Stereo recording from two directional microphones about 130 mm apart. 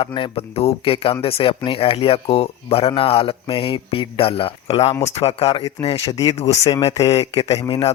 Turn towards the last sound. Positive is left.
turn(degrees=45)  # may be behind; listen again after turning